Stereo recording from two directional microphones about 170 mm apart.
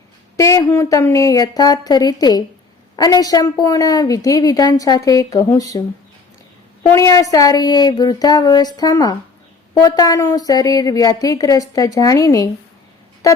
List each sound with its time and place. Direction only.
0.3 s a woman's voice: 20° left (ahead or behind)
6.9 s a woman's voice: 20° left (ahead or behind)